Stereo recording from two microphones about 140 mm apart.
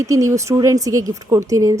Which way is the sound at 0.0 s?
25° right (ahead or behind).